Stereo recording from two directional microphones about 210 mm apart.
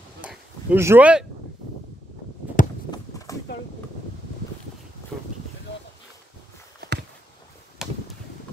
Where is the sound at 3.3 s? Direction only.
15° left (ahead or behind).